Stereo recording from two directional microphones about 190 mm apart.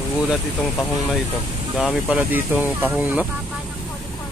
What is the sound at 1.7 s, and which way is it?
Speech, 5° right (ahead or behind).